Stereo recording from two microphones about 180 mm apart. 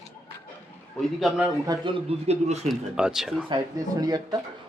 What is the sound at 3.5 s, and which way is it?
Speech, 20° right (ahead or behind).